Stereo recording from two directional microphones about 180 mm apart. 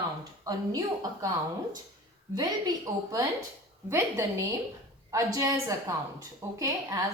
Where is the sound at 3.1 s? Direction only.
15° right (ahead or behind).